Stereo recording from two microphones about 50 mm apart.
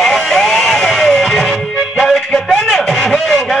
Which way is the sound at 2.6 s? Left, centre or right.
Centre.